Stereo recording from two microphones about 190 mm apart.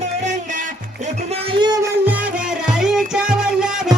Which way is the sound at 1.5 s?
20° right (ahead or behind).